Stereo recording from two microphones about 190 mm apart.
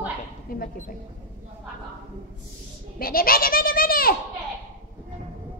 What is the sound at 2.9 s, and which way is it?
A child's voice, 50° left (ahead or behind).